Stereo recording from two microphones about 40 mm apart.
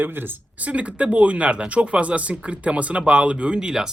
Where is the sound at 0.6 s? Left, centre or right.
Right.